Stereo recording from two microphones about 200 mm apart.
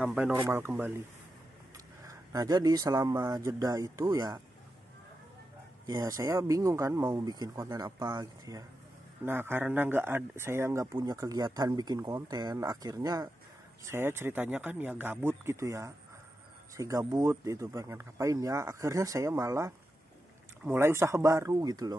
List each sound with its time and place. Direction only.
0.0 s speech: 5° right (ahead or behind)
2.0 s speech: 20° right (ahead or behind)
5.9 s speech: 15° right (ahead or behind)